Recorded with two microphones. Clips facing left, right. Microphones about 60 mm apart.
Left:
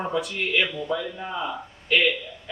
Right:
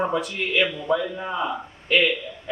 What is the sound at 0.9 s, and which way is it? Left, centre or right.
Speech, centre.